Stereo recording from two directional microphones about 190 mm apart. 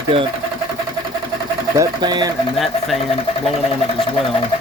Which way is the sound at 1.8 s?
20° right (ahead or behind).